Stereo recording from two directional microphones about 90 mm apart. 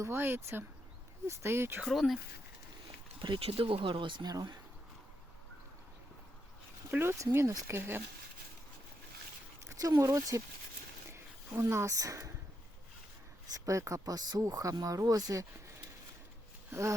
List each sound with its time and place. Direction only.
0.0 s speech: 25° right (ahead or behind)
1.8 s speech: centre (ahead or behind)
3.2 s speech: 70° right (ahead or behind); by 4.5 s 50° right (ahead or behind)
6.9 s speech: 30° right (ahead or behind)
9.6 s speech: 40° right (ahead or behind)
11.1 s a sound: 30° right (ahead or behind)
13.5 s speech: 35° right (ahead or behind)
16.7 s speech: 30° right (ahead or behind)